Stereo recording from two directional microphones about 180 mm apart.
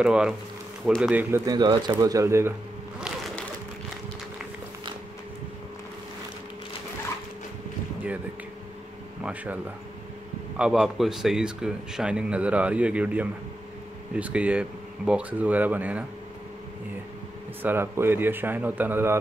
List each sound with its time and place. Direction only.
0.0 s speech: 5° right (ahead or behind)
1.4 s speech: 20° right (ahead or behind)
9.2 s speech: 10° right (ahead or behind)
10.6 s speech: centre (ahead or behind)
17.6 s speech: 10° right (ahead or behind)